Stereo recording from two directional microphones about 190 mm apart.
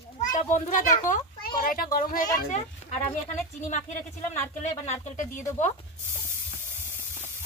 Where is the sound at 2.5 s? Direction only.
35° left (ahead or behind).